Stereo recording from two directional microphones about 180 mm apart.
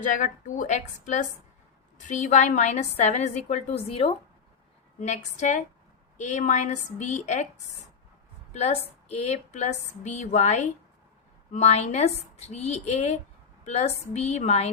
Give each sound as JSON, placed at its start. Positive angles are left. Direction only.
{"t": 0.0, "sound": "a woman's voice", "side_deg": 45}
{"t": 8.5, "sound": "a woman's voice", "side_deg": 35}